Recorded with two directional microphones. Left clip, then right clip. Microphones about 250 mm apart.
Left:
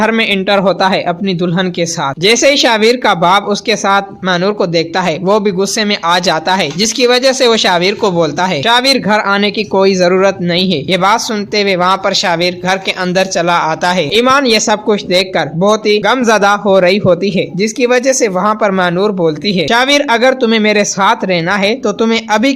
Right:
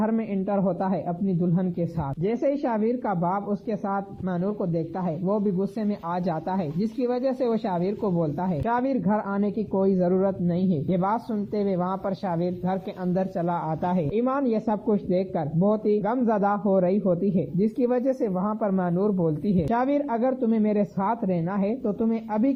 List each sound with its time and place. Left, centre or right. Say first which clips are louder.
0.0 s speech: left 16 dB; centre
2.2 s speech: left 17 dB; left
13.7 s speech: left 15 dB; centre
14.5 s speech: left 15 dB; centre
17.3 s speech: left 12 dB; left
17.9 s speech: left 14 dB; centre